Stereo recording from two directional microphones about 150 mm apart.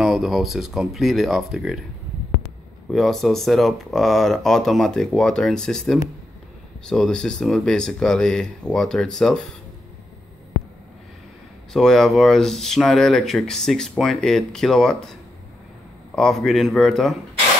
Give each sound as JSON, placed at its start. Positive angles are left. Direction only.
{"t": 0.0, "sound": "speech", "side_deg": 0}
{"t": 2.9, "sound": "speech", "side_deg": 0}
{"t": 11.7, "sound": "speech", "side_deg": 5}
{"t": 16.2, "sound": "speech", "side_deg": 0}